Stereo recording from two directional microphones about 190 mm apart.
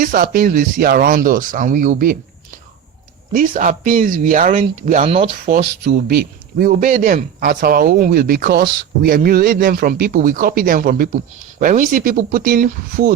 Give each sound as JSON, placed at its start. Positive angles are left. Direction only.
{"t": 0.0, "sound": "speech", "side_deg": -45}
{"t": 3.3, "sound": "speech", "side_deg": -45}
{"t": 5.0, "sound": "speech", "side_deg": -30}
{"t": 5.5, "sound": "speech", "side_deg": -60}